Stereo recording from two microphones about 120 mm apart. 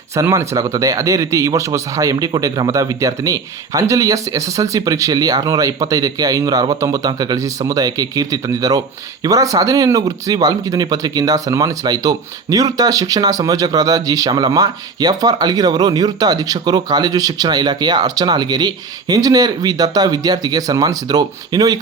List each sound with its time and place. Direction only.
0.2 s a man's voice: 25° right (ahead or behind)